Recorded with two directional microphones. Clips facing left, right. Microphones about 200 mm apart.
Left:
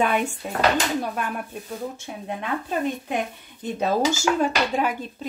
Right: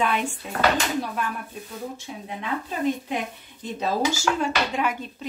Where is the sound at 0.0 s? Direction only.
50° left (ahead or behind).